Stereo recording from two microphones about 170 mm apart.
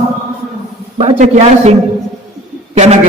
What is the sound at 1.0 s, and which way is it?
Speech, 40° right (ahead or behind).